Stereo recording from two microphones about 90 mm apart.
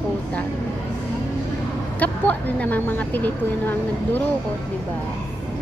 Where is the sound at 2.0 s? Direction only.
20° left (ahead or behind).